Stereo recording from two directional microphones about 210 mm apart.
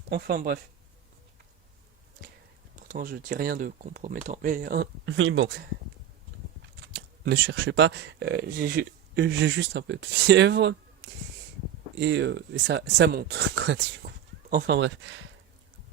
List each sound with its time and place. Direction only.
0.1 s speech: 50° right (ahead or behind)
2.8 s speech: 40° right (ahead or behind)
5.0 s speech: 65° right (ahead or behind)
6.9 s speech: 55° right (ahead or behind)